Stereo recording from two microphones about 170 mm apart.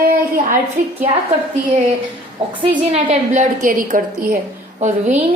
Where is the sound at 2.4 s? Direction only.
35° right (ahead or behind); by 4.2 s 55° right (ahead or behind).